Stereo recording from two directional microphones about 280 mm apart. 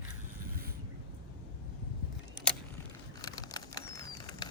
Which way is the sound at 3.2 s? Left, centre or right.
Centre.